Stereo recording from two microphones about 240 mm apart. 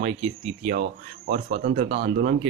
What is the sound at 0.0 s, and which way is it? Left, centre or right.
Speech, right.